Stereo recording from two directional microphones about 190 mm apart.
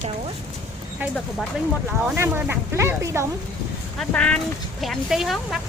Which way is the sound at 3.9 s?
5° left (ahead or behind).